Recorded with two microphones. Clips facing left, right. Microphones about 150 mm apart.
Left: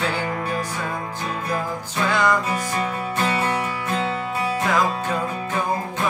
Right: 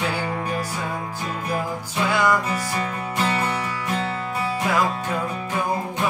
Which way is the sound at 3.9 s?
20° left (ahead or behind).